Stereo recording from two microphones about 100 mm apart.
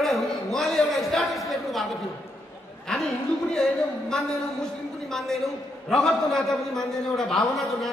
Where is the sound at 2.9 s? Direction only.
5° left (ahead or behind).